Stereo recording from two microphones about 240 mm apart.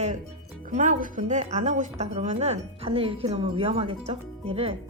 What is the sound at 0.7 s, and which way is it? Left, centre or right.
Speech, right.